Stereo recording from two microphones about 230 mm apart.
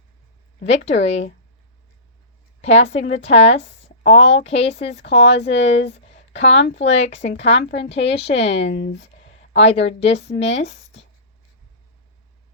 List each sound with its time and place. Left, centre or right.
0.9 s speech: left
2.6 s speech: left
5.2 s speech: left
5.9 s a sound: left
6.8 s speech: left
8.6 s speech: left
9.6 s speech: left